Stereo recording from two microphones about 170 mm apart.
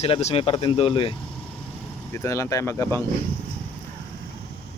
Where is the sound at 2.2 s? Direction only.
15° left (ahead or behind).